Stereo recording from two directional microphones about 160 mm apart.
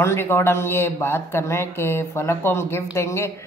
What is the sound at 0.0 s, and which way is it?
A man's voice, 15° left (ahead or behind).